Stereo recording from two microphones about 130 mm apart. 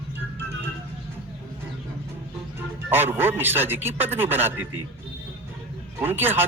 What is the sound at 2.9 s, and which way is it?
Speech, 15° right (ahead or behind).